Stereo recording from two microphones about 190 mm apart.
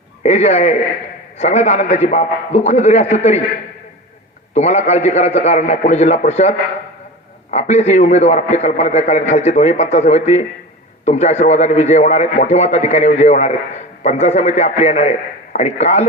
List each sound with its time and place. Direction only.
0.2 s a man's voice: 35° left (ahead or behind)
4.5 s a man's voice: 35° left (ahead or behind)
7.5 s a man's voice: 35° left (ahead or behind)